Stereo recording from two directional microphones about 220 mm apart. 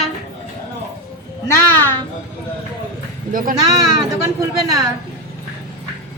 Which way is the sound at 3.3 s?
40° right (ahead or behind).